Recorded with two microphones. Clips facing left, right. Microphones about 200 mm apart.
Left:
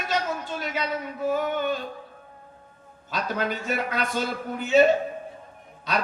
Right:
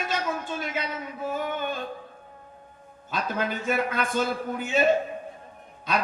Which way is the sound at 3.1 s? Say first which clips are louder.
Left 1 dB; 50° right (ahead or behind).